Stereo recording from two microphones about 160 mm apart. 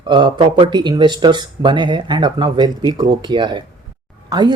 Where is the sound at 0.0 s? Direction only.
30° right (ahead or behind).